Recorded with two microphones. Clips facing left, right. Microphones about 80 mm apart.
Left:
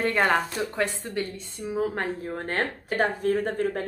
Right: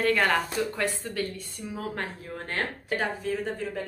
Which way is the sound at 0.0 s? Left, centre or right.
Left.